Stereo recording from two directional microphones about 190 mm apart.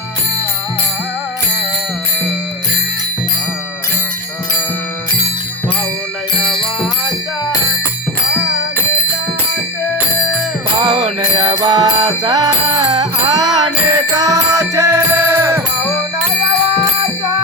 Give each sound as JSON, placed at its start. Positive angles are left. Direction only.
{"t": 10.8, "sound": "music", "side_deg": -20}